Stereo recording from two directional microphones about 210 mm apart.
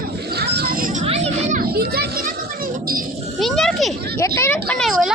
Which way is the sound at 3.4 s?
Centre (ahead or behind).